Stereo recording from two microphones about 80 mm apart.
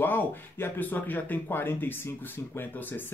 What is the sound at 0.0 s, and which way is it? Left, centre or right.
Speech, left.